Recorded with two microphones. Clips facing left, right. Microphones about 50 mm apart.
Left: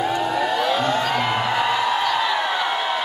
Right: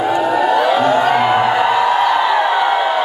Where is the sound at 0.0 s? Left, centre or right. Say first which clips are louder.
Right 7 dB; centre.